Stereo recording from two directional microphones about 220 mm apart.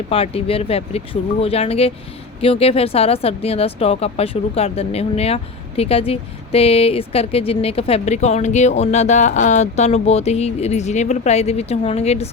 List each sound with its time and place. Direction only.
0.1 s speech: 25° left (ahead or behind)